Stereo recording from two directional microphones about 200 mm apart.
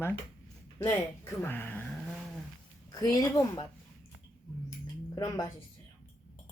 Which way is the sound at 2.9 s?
15° left (ahead or behind).